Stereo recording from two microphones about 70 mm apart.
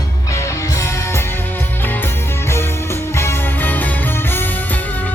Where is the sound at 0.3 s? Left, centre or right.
Left.